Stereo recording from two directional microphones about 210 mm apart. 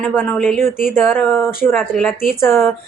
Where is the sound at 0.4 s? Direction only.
Centre (ahead or behind).